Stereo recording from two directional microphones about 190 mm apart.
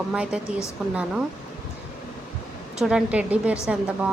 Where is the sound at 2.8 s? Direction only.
5° right (ahead or behind).